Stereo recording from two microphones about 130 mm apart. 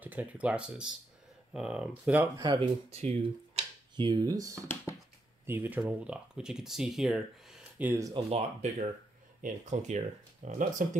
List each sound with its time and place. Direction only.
0.0 s speech: 15° right (ahead or behind)
2.6 s speech: 55° right (ahead or behind); by 4.6 s 25° right (ahead or behind)
5.5 s speech: 15° right (ahead or behind)
7.8 s speech: 15° right (ahead or behind)
8.1 s speech: 50° right (ahead or behind)
9.4 s speech: 65° right (ahead or behind)